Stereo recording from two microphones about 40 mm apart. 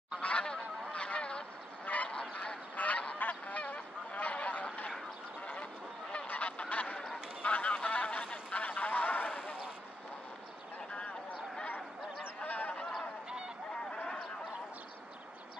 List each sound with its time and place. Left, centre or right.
0.2 s goose: left
2.7 s goose: left
3.2 s honk: left
6.2 s goose: left
7.4 s a sound: left
12.4 s honk: left
13.9 s a sound: left